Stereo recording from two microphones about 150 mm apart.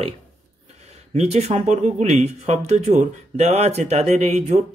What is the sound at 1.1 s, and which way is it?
Speech, 45° right (ahead or behind).